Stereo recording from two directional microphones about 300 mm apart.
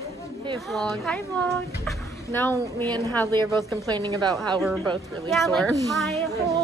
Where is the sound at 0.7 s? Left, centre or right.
Centre.